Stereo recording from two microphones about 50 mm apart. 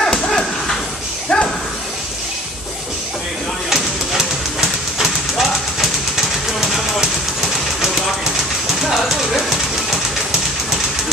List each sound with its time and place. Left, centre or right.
0.0 s dog: centre
1.3 s a sound: centre
3.7 s train: centre
8.8 s train: centre